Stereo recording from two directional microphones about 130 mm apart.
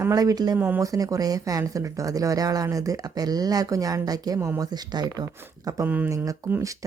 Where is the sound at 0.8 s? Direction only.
25° right (ahead or behind).